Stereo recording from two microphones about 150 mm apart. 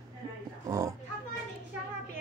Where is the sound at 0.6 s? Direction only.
20° right (ahead or behind).